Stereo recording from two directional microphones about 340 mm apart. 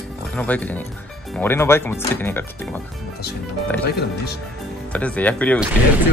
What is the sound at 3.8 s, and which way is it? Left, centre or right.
Speech, left.